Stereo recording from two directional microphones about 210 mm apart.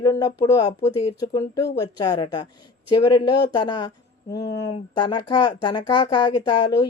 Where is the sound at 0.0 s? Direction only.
15° left (ahead or behind).